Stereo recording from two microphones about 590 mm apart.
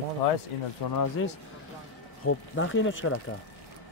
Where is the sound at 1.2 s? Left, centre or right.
Left.